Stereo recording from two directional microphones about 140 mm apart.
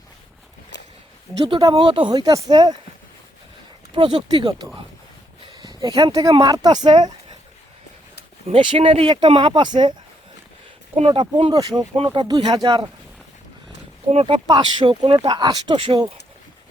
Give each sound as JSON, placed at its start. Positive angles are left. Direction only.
{"t": 1.5, "sound": "speech", "side_deg": -35}
{"t": 3.9, "sound": "speech", "side_deg": -35}
{"t": 8.4, "sound": "speech", "side_deg": -40}
{"t": 10.9, "sound": "speech", "side_deg": -40}
{"t": 14.1, "sound": "speech", "side_deg": -45}
{"t": 14.4, "sound": "speech", "side_deg": -30}